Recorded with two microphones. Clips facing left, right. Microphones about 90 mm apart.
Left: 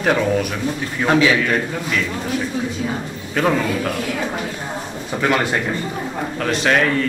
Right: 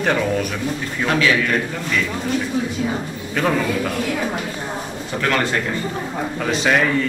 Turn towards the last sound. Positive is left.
turn(degrees=0)  # may be behind; listen again after turning